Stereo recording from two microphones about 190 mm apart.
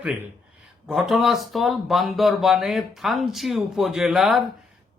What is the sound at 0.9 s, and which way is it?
Speech, centre (ahead or behind).